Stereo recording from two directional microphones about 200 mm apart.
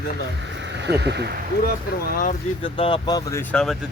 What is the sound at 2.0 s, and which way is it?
Speech, 45° left (ahead or behind).